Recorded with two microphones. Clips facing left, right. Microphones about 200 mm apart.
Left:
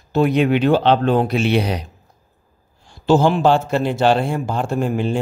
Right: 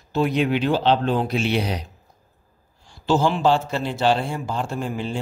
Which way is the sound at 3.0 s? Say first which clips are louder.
Left 5 dB; 55° left (ahead or behind).